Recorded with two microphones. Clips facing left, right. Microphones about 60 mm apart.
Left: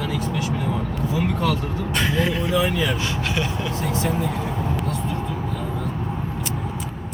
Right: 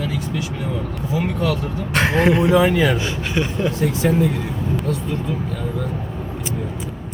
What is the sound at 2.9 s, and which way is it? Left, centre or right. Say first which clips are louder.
Speech: right 2 dB; centre.